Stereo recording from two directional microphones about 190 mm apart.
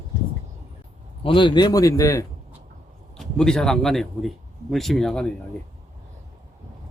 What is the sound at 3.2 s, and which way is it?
A man's voice, 5° left (ahead or behind).